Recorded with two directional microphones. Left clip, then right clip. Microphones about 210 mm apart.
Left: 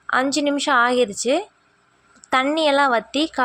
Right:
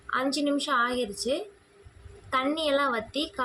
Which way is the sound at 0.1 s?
35° left (ahead or behind).